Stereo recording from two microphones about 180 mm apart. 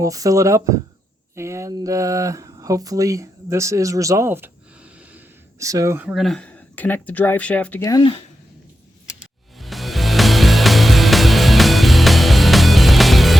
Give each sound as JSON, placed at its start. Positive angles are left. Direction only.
{"t": 0.0, "sound": "speech", "side_deg": -20}
{"t": 6.1, "sound": "speech", "side_deg": 0}
{"t": 9.6, "sound": "music", "side_deg": 0}